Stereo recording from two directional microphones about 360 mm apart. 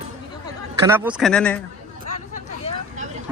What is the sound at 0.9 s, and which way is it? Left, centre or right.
Speech, centre.